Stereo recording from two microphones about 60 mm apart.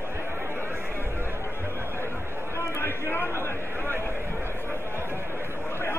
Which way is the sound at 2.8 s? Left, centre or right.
Left.